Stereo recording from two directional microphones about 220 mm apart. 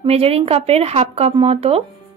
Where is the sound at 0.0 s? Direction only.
25° right (ahead or behind).